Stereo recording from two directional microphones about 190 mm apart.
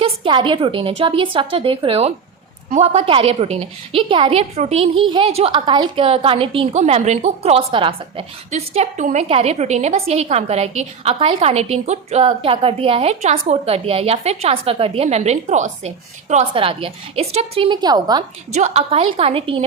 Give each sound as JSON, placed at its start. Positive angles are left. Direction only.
{"t": 0.0, "sound": "a woman's voice", "side_deg": -25}
{"t": 18.5, "sound": "a woman's voice", "side_deg": -35}